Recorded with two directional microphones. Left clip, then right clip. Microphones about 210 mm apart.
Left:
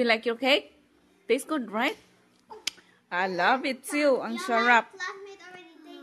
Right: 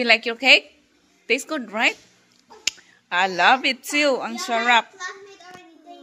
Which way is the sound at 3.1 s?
5° left (ahead or behind).